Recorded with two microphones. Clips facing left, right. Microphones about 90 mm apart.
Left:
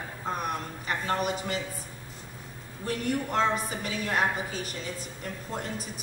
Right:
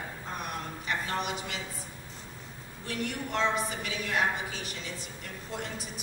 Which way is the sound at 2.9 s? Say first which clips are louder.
Left 4 dB; 45° left (ahead or behind).